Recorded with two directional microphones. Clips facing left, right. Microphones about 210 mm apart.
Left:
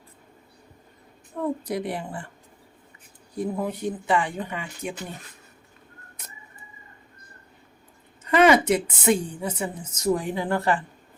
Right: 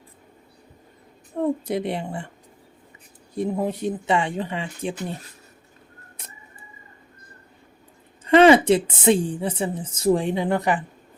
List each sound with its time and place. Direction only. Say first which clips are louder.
1.4 s a woman's voice: right 4 dB; 25° right (ahead or behind)
3.3 s a woman's voice: right 3 dB; 25° right (ahead or behind)
8.3 s a woman's voice: right 4 dB; 30° right (ahead or behind)